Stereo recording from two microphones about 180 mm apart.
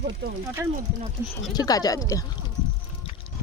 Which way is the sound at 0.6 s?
10° right (ahead or behind).